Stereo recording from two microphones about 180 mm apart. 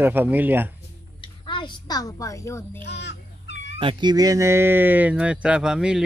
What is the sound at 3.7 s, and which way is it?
Speech, 25° right (ahead or behind).